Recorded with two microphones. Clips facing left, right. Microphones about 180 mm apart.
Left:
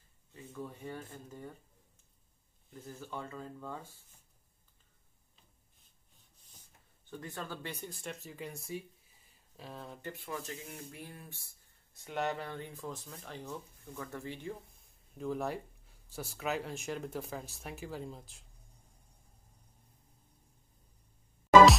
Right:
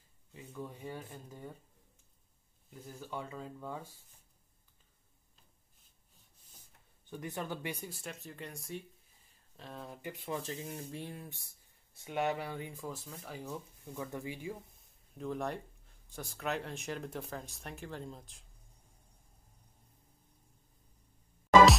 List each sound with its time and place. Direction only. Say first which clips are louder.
0.3 s speech: even; 15° right (ahead or behind)
2.7 s speech: even; 15° right (ahead or behind)
7.1 s speech: right 3 dB; 15° right (ahead or behind)
7.9 s speech: left 1 dB; centre (ahead or behind)
10.0 s speech: right 3 dB; 20° right (ahead or behind)
12.0 s speech: right 2 dB; 5° right (ahead or behind)